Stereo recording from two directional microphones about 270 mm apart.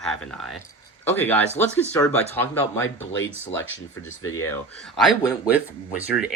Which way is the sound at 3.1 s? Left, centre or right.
Left.